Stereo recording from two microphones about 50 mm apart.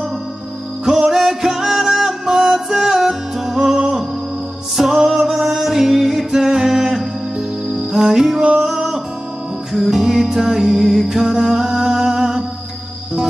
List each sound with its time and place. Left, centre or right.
0.8 s music: centre
8.4 s a sound: right
8.6 s music: centre